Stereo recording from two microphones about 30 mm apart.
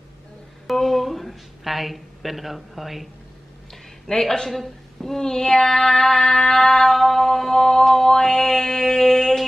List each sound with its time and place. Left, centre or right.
0.7 s a woman's voice: centre
4.1 s a man's voice: centre
4.5 s a sound: centre
8.1 s music: centre